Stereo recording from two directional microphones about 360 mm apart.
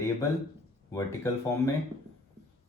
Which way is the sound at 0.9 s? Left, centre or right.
Centre.